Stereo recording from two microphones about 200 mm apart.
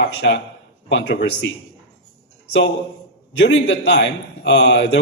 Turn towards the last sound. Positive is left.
turn(degrees=65)  # may be behind; listen again after turning